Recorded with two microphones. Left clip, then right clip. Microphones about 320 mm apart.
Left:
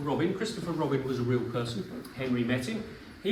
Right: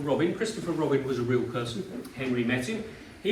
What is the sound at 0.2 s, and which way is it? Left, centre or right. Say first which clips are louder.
Speech: right 3 dB; left.